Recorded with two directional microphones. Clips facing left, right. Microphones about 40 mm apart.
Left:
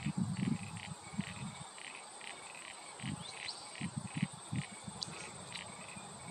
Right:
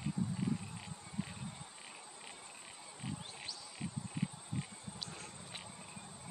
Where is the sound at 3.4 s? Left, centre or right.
Left.